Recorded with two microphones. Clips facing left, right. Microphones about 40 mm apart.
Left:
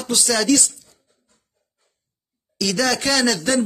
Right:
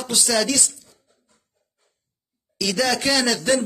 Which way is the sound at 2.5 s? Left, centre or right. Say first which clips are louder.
Left 1 dB; centre.